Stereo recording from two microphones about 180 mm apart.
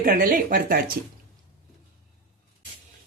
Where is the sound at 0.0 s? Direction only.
50° right (ahead or behind).